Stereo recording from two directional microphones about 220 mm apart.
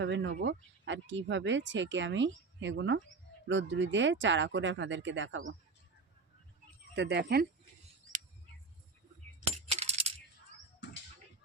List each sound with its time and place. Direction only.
0.0 s speech: 55° right (ahead or behind)
6.9 s speech: 50° right (ahead or behind)
9.6 s coin: 30° right (ahead or behind)